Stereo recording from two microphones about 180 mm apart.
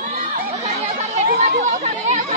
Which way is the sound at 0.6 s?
40° right (ahead or behind).